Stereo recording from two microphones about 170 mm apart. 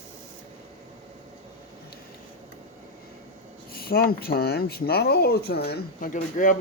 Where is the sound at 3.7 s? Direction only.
65° left (ahead or behind); by 6.6 s 50° left (ahead or behind).